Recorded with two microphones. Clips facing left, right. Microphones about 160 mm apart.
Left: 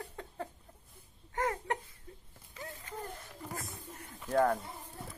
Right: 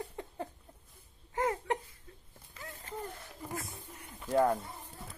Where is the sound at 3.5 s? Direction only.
45° left (ahead or behind).